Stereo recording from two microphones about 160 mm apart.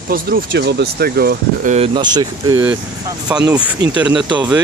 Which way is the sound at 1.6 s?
40° right (ahead or behind).